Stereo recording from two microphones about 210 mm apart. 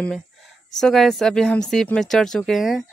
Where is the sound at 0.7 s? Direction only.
Centre (ahead or behind).